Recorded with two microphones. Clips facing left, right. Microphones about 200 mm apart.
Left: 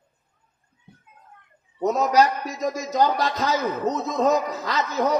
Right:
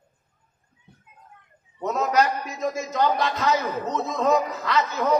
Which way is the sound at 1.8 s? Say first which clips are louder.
Left 3 dB; 35° left (ahead or behind).